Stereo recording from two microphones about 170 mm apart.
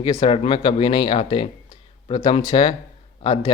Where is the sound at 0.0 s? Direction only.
30° left (ahead or behind).